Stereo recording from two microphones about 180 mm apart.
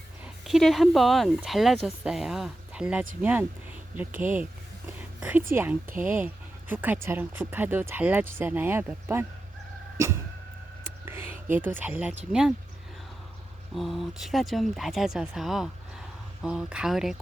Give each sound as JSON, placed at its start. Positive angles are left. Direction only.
{"t": 0.4, "sound": "speech", "side_deg": 0}
{"t": 4.9, "sound": "whispering", "side_deg": -10}
{"t": 6.1, "sound": "speech", "side_deg": -10}
{"t": 10.8, "sound": "whispering", "side_deg": -10}
{"t": 11.5, "sound": "speech", "side_deg": -10}
{"t": 13.7, "sound": "speech", "side_deg": 0}